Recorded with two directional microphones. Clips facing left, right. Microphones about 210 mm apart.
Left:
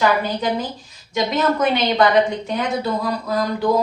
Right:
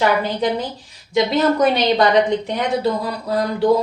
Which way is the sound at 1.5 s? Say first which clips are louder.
Right 3 dB; 35° right (ahead or behind).